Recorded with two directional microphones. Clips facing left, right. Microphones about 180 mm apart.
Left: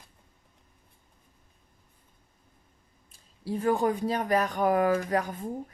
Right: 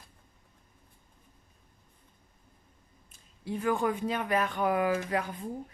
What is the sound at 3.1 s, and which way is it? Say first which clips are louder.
A woman's voice: left 3 dB; 35° left (ahead or behind).